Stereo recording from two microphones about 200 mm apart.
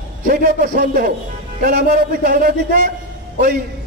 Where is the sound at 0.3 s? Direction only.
45° right (ahead or behind).